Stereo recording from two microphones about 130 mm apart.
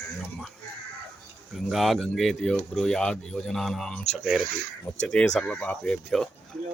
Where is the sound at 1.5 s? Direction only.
Centre (ahead or behind).